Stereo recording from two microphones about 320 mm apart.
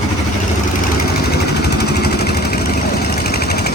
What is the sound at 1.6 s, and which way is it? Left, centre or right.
Vehicle, left.